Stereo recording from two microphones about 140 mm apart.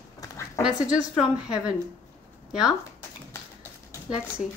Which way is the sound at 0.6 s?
5° right (ahead or behind).